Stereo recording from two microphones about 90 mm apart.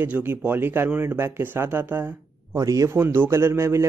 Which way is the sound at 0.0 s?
25° right (ahead or behind).